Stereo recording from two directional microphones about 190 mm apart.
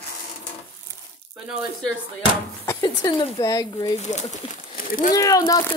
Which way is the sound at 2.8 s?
20° left (ahead or behind).